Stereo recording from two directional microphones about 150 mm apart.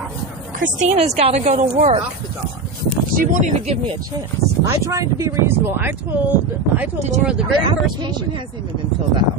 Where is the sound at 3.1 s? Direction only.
65° right (ahead or behind).